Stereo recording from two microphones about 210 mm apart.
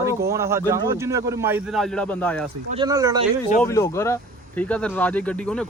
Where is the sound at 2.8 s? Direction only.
15° right (ahead or behind).